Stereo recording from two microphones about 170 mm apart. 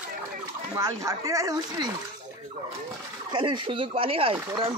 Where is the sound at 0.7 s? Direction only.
20° right (ahead or behind).